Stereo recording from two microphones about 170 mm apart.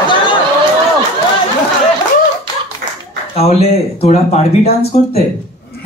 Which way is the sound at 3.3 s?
35° left (ahead or behind).